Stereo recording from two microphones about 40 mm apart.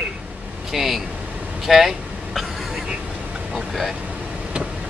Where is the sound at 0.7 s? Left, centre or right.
Centre.